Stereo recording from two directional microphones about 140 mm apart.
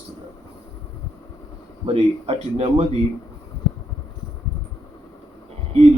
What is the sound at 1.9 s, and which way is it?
Speech, 45° right (ahead or behind).